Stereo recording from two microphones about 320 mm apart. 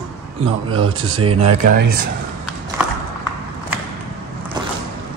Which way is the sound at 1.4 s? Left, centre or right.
Right.